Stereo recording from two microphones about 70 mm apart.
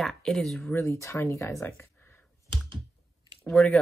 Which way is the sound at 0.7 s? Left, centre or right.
Left.